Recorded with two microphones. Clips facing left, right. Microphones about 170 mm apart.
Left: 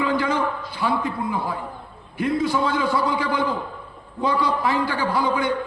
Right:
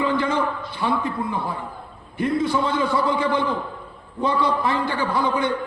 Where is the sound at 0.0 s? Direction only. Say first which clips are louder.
Even; 30° right (ahead or behind).